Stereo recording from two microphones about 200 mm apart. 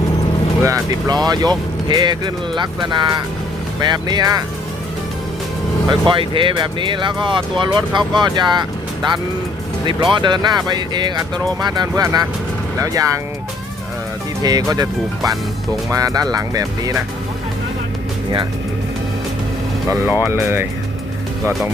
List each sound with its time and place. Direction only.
0.6 s speech: 15° right (ahead or behind)
5.9 s speech: 25° right (ahead or behind)
9.8 s speech: 25° right (ahead or behind)
14.4 s speech: 20° right (ahead or behind)
15.2 s speech: centre (ahead or behind)
15.9 s speech: 15° right (ahead or behind)
20.1 s speech: 10° right (ahead or behind)